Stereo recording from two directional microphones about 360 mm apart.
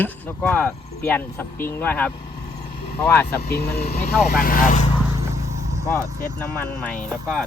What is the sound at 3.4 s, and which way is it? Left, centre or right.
Speech, left.